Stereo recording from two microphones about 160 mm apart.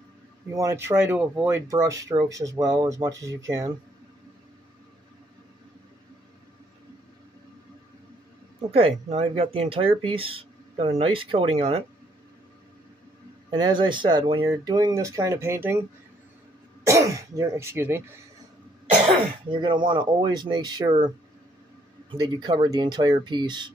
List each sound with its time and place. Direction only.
0.5 s speech: 20° right (ahead or behind)
8.5 s speech: 35° right (ahead or behind)
13.5 s speech: 30° right (ahead or behind)
16.8 s speech: 20° right (ahead or behind)
19.0 s speech: 30° right (ahead or behind)
22.1 s speech: 25° right (ahead or behind)